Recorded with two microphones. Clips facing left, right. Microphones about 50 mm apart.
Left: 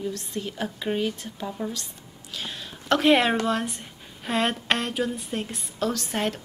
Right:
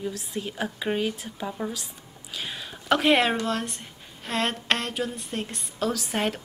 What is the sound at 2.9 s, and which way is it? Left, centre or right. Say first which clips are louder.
A woman's voice: left 1 dB; centre.